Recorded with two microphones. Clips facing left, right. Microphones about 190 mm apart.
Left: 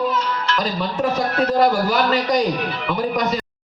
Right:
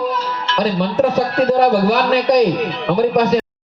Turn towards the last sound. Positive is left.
turn(degrees=-70)  # may be behind; listen again after turning